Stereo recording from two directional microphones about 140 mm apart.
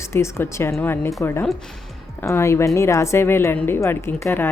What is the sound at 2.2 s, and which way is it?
A woman's voice, 20° left (ahead or behind).